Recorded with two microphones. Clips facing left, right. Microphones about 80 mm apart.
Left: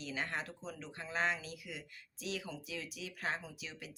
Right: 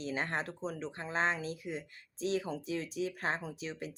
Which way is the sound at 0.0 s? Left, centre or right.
Right.